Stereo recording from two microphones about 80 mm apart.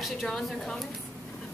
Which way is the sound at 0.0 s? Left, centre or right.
Centre.